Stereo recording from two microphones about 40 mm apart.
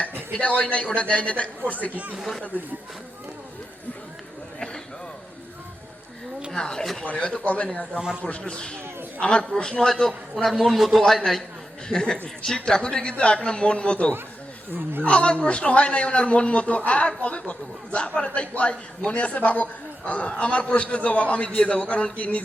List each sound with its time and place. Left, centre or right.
0.3 s a man's voice: left
1.9 s speech: right
6.5 s speech: centre
7.0 s a man's voice: left
7.9 s speech: centre
8.2 s a man's voice: left; by 10.1 s centre
10.1 s a man's voice: centre
11.9 s a man's voice: centre
14.7 s speech: right
15.0 s a man's voice: left